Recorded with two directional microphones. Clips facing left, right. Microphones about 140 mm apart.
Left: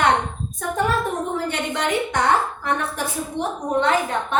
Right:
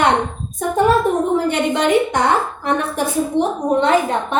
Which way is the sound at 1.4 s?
20° right (ahead or behind).